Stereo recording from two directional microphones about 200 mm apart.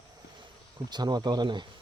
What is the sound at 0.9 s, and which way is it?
Speech, 20° right (ahead or behind).